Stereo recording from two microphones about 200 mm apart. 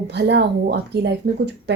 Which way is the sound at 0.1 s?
55° right (ahead or behind).